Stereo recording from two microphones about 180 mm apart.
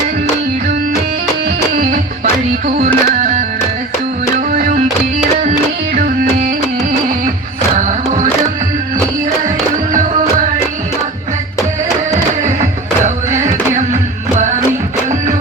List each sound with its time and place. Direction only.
1.7 s music: 45° right (ahead or behind)
4.5 s music: 50° right (ahead or behind)
7.8 s music: 45° right (ahead or behind)
13.3 s music: 40° right (ahead or behind)